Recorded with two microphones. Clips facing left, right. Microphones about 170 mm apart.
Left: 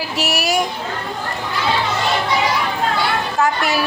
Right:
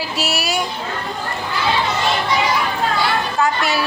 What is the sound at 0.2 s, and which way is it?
Speech, 45° left (ahead or behind).